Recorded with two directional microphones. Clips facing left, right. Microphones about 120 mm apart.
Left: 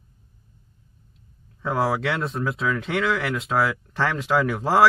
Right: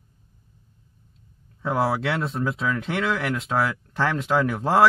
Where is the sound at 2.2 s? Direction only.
Centre (ahead or behind).